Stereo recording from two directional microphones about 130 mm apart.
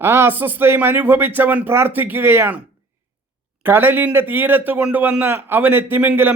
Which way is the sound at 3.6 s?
15° right (ahead or behind).